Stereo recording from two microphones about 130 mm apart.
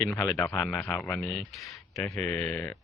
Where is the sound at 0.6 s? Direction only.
5° left (ahead or behind).